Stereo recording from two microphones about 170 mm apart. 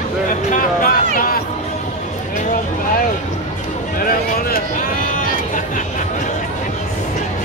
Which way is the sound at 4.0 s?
60° left (ahead or behind).